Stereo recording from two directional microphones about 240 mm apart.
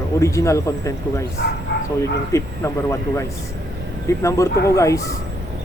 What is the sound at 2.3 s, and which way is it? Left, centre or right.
Speech, centre.